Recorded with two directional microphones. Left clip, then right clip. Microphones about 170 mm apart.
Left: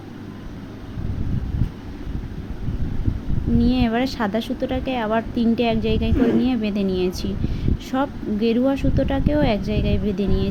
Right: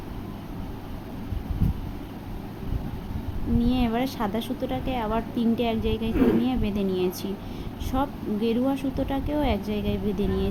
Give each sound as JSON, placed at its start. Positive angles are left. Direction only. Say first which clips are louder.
{"t": 3.6, "sound": "a woman's voice", "louder": "left 5 dB", "side_deg": 25}